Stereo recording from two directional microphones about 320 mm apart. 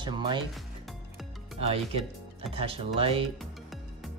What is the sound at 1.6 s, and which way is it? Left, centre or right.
Speech, centre.